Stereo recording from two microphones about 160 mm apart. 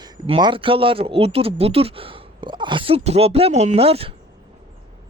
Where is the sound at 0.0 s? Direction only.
30° right (ahead or behind).